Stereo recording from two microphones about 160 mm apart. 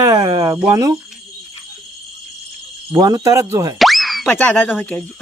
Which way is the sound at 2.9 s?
25° right (ahead or behind).